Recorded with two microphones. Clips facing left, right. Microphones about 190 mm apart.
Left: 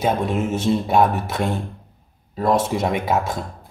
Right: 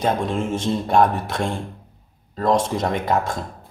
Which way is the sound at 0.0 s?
5° left (ahead or behind).